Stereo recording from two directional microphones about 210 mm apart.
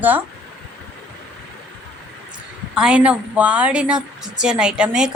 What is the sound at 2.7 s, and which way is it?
A woman's voice, 5° right (ahead or behind).